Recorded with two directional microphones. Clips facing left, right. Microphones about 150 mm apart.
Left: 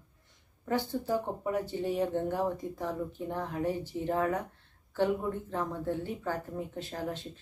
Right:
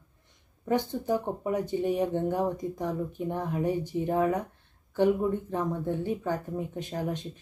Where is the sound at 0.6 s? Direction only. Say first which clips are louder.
Right 4 dB; 15° right (ahead or behind).